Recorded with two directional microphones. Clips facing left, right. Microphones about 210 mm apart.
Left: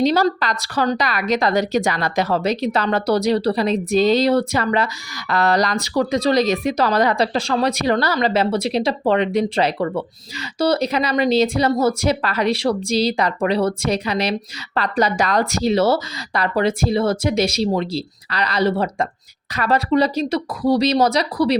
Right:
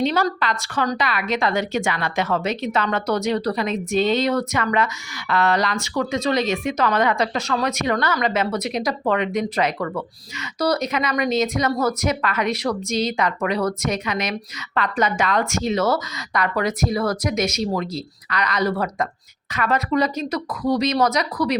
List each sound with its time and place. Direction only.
0.0 s a woman's voice: 35° left (ahead or behind)